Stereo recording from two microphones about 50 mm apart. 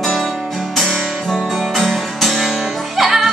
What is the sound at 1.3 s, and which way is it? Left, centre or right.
Music, centre.